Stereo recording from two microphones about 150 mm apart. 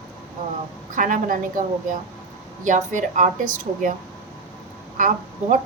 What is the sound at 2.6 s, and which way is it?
A woman's voice, 55° right (ahead or behind).